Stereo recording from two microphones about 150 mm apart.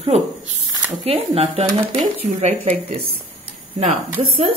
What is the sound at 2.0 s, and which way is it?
Speech, 55° right (ahead or behind).